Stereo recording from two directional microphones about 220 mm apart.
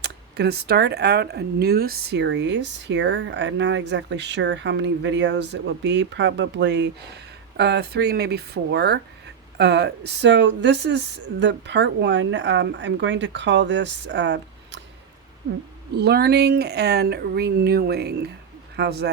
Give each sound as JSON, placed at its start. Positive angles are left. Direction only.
{"t": 0.0, "sound": "speech", "side_deg": -50}
{"t": 16.0, "sound": "speech", "side_deg": -45}